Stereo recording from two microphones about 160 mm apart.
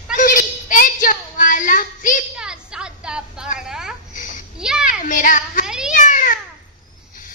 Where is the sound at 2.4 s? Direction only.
5° right (ahead or behind).